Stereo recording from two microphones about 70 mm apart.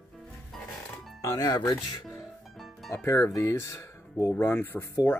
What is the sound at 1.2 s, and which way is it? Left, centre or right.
Speech, left.